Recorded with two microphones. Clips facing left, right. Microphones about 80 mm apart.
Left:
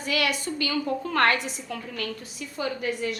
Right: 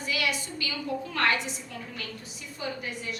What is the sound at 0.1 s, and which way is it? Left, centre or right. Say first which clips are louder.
A woman's voice: left 5 dB; left.